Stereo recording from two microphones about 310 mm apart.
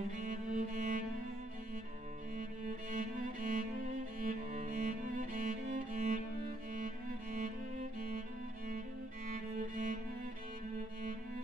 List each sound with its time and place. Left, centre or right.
0.2 s music: right
2.9 s music: right
9.3 s music: right